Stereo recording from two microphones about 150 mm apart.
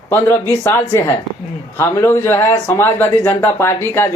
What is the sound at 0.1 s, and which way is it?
A man's voice, 15° left (ahead or behind).